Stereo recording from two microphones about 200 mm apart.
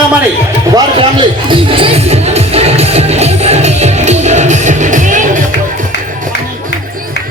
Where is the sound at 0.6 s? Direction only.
20° right (ahead or behind).